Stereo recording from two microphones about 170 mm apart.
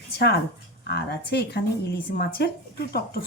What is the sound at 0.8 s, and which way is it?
Speech, 75° left (ahead or behind).